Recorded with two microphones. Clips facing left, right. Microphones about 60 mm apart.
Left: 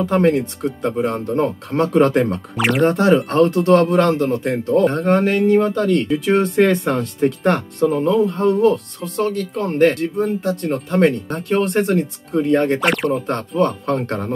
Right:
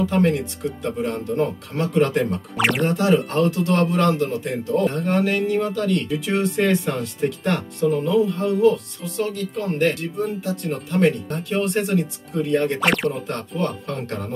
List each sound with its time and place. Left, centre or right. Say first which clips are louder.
0.1 s speech: left 4 dB; left
2.5 s speech: left 2 dB; centre
2.8 s speech: left 7 dB; left
12.8 s speech: left 2 dB; centre
13.3 s speech: left 7 dB; left